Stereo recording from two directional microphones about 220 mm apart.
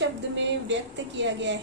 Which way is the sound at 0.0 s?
55° right (ahead or behind).